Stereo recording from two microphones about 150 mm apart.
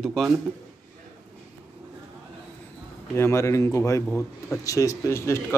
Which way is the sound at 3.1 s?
15° left (ahead or behind).